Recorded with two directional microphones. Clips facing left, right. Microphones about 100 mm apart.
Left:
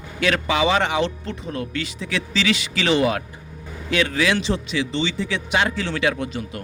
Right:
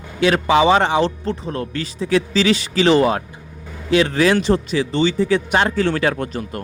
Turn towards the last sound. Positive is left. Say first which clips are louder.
# right 2 dB
turn(degrees=-45)  # may be behind; listen again after turning